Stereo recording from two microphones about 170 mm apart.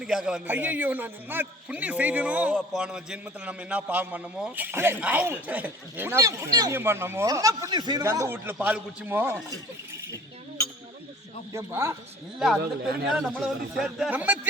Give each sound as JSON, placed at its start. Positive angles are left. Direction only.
{"t": 0.0, "sound": "a man's voice", "side_deg": -5}
{"t": 11.5, "sound": "a man's voice", "side_deg": -15}
{"t": 13.1, "sound": "speech", "side_deg": -5}